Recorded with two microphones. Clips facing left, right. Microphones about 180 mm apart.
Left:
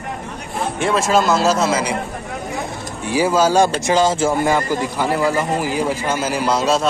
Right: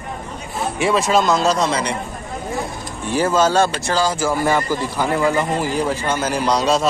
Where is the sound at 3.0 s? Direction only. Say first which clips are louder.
Left 1 dB; 10° left (ahead or behind).